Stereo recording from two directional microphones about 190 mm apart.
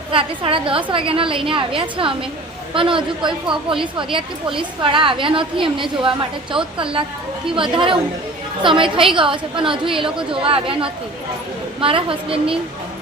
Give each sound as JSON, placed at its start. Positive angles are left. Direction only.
{"t": 0.1, "sound": "a woman's voice", "side_deg": -30}